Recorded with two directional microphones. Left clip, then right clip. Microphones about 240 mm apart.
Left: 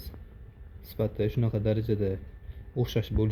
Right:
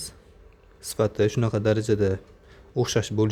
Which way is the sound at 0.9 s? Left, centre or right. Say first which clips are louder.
Right 7 dB; right.